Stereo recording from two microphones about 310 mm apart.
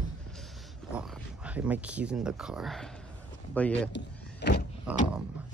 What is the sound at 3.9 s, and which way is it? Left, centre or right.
Power windows, left.